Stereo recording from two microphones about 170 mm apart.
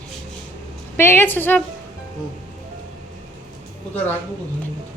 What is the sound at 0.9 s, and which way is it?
Speech, 15° left (ahead or behind).